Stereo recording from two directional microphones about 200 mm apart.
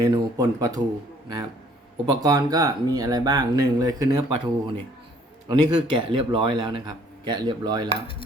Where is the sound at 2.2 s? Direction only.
20° right (ahead or behind).